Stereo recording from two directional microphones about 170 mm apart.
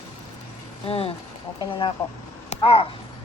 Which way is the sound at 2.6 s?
35° left (ahead or behind).